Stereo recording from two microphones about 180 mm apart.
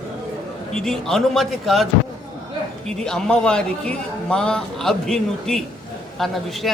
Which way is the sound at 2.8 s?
5° left (ahead or behind).